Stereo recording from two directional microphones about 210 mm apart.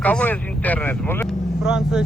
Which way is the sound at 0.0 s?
5° left (ahead or behind).